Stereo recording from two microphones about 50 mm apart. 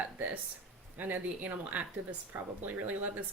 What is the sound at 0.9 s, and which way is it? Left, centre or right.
Speech, right.